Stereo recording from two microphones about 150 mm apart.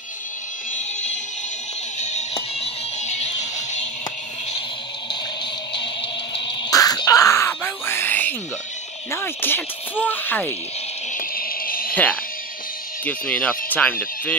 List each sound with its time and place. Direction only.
2.0 s music: 50° left (ahead or behind)
5.7 s music: 35° left (ahead or behind); by 8.4 s 10° left (ahead or behind)
9.1 s speech: 15° left (ahead or behind)
11.1 s a sound: 75° left (ahead or behind)
11.9 s speech: 10° left (ahead or behind)